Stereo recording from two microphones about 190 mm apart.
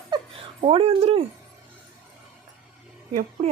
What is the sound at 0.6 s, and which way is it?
Speech, 30° right (ahead or behind).